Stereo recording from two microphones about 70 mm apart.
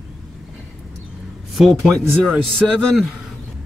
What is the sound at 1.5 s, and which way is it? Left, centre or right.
Speech, centre.